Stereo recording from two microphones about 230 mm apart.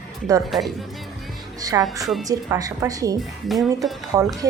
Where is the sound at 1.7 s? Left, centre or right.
Centre.